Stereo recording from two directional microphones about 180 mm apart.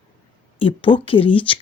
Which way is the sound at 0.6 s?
30° left (ahead or behind).